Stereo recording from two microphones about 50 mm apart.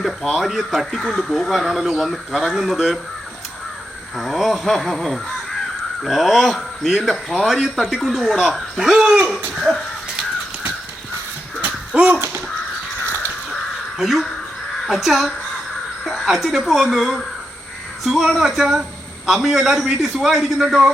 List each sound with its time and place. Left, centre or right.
0.0 s speech: centre
4.2 s speech: centre
11.9 s crow: right
14.0 s speech: centre